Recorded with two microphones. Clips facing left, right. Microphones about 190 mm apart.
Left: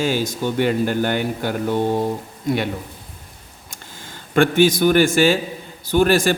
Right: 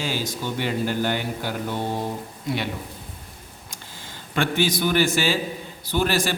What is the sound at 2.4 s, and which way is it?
Speech, 50° left (ahead or behind).